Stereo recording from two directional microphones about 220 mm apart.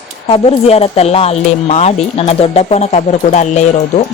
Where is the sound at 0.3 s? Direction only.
25° left (ahead or behind).